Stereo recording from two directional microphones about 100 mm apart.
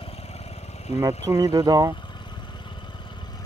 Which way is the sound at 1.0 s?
30° right (ahead or behind).